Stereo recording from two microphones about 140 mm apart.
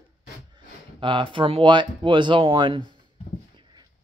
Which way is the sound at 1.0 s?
35° right (ahead or behind).